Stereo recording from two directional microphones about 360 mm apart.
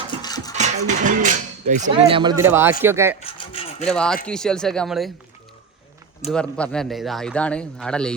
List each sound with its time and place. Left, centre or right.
0.2 s music: centre
0.5 s a man's voice: centre
3.3 s rub: centre
3.8 s a man's voice: centre
6.3 s a man's voice: centre